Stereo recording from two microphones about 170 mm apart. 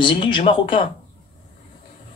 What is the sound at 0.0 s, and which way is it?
Speech, 30° left (ahead or behind).